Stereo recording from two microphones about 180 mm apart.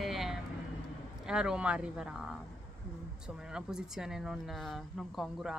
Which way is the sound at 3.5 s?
5° right (ahead or behind).